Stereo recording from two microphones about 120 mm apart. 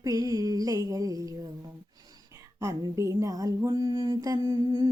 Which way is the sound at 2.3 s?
25° right (ahead or behind).